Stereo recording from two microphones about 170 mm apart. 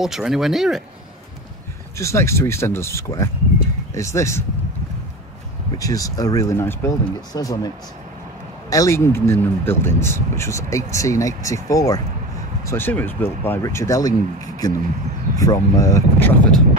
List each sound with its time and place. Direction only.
0.0 s speech: centre (ahead or behind)
2.0 s speech: 15° left (ahead or behind)
5.8 s speech: 20° left (ahead or behind)